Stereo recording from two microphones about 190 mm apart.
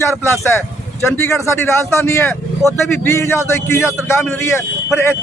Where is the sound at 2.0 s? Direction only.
15° left (ahead or behind).